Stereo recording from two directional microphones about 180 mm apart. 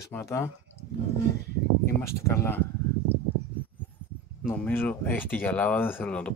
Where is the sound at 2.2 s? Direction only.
15° left (ahead or behind).